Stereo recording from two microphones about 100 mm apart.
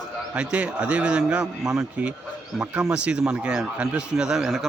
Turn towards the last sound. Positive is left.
turn(degrees=-5)  # may be behind; listen again after turning